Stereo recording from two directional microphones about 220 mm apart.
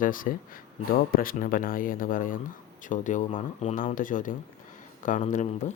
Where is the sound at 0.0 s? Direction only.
40° left (ahead or behind).